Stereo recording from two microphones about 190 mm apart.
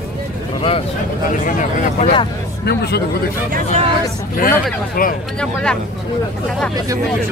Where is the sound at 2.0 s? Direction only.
30° left (ahead or behind).